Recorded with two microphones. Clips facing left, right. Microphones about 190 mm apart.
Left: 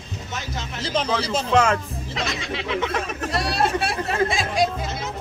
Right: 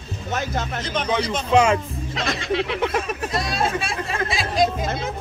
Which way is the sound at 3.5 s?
65° left (ahead or behind).